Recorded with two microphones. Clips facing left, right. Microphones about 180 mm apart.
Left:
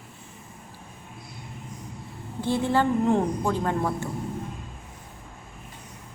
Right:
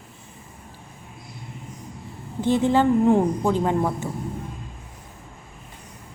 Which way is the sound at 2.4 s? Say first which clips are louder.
Right 5 dB; 20° right (ahead or behind).